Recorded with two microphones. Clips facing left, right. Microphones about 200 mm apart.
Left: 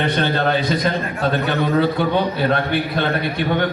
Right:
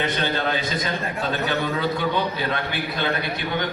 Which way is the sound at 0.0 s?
55° left (ahead or behind).